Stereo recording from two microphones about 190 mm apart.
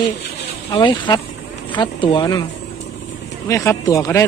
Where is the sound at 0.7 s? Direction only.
25° left (ahead or behind).